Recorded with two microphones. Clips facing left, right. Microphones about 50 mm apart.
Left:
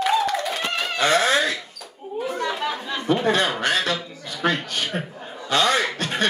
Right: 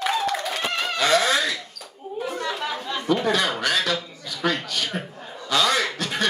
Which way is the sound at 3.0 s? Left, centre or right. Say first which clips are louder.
Left 2 dB; left.